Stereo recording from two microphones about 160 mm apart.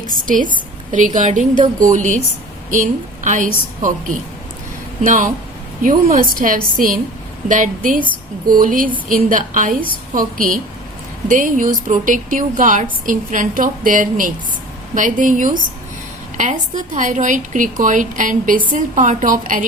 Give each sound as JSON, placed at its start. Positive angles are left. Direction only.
{"t": 0.3, "sound": "a woman's voice", "side_deg": -55}